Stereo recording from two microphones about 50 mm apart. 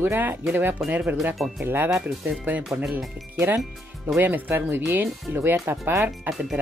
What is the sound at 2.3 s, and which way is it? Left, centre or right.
Speech, right.